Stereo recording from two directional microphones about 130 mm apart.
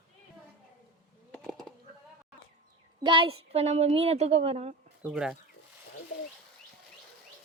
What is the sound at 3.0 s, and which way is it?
A woman's voice, 40° right (ahead or behind).